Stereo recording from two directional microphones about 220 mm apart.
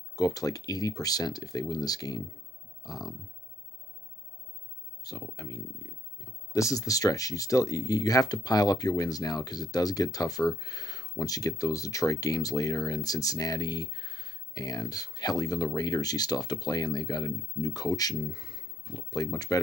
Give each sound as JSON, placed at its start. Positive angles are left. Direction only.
{"t": 0.1, "sound": "speech", "side_deg": 15}
{"t": 2.8, "sound": "a sound", "side_deg": 15}
{"t": 5.0, "sound": "speech", "side_deg": 15}